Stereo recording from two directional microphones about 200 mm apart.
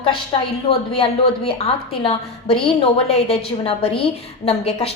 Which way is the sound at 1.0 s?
30° left (ahead or behind).